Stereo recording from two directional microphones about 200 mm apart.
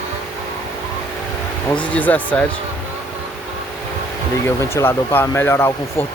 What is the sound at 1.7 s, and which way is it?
Speech, 5° left (ahead or behind).